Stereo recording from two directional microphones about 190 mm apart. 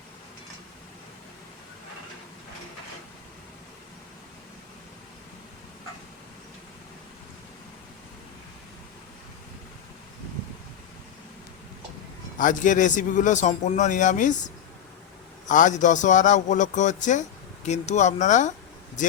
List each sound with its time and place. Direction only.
12.4 s a man's voice: 45° left (ahead or behind)